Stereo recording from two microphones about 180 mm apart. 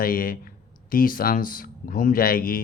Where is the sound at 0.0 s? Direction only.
50° left (ahead or behind).